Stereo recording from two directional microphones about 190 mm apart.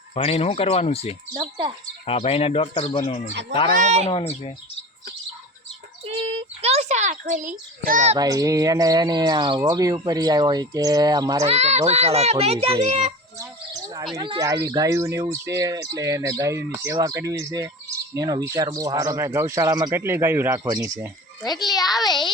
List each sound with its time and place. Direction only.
0.1 s speech: 30° left (ahead or behind)
1.3 s speech: 25° right (ahead or behind)
2.0 s speech: 30° left (ahead or behind)
6.1 s a child's voice: 30° right (ahead or behind)
8.1 s speech: 15° right (ahead or behind)
11.4 s a child's voice: 35° right (ahead or behind)
14.2 s speech: 20° right (ahead or behind)
21.4 s a child's voice: 20° left (ahead or behind)